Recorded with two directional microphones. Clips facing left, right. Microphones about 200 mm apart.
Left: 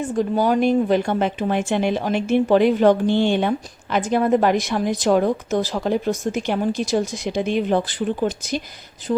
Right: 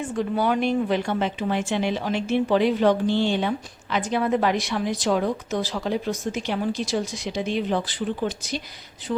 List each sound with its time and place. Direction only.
0.0 s a woman's voice: 40° left (ahead or behind)
9.1 s speech: 30° left (ahead or behind)